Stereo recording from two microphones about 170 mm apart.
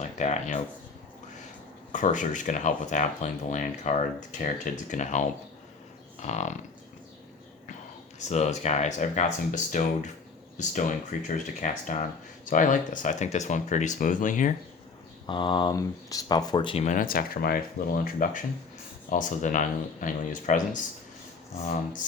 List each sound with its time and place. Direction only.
0.0 s speech: 40° left (ahead or behind)
1.9 s speech: 50° left (ahead or behind)
6.1 s livestock: 40° left (ahead or behind)
8.3 s speech: 40° left (ahead or behind)
15.3 s speech: 30° left (ahead or behind)
16.8 s speech: 50° left (ahead or behind)